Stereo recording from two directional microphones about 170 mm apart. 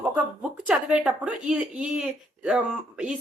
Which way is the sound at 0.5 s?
5° right (ahead or behind).